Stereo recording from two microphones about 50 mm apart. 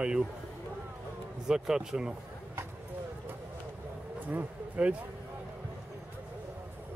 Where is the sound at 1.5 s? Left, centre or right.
Centre.